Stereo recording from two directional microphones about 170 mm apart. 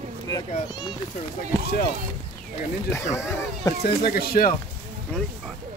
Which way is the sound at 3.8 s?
65° left (ahead or behind).